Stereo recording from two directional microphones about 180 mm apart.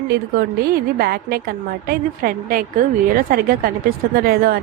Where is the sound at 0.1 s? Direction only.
55° right (ahead or behind).